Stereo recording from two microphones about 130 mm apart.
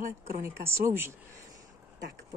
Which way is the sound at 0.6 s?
20° right (ahead or behind).